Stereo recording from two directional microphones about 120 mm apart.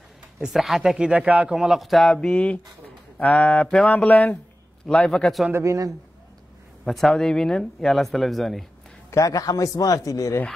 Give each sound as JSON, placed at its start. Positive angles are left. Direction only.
{"t": 0.4, "sound": "speech", "side_deg": 0}
{"t": 3.2, "sound": "music", "side_deg": 10}
{"t": 4.8, "sound": "speech", "side_deg": 5}
{"t": 5.5, "sound": "speech", "side_deg": -25}
{"t": 6.8, "sound": "speech", "side_deg": 0}
{"t": 9.1, "sound": "a man's voice", "side_deg": 30}